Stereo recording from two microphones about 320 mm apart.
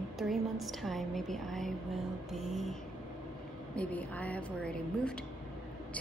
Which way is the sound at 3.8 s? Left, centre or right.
Centre.